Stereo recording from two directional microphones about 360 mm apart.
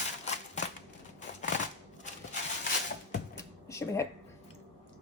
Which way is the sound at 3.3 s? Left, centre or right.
Centre.